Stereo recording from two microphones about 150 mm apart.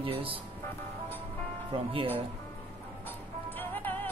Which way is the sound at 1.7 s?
35° right (ahead or behind).